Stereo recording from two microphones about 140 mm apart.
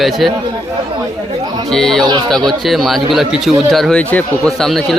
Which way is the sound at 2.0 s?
30° right (ahead or behind).